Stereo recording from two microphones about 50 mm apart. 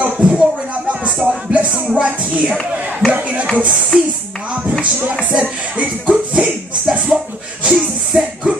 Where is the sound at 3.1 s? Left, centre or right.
Right.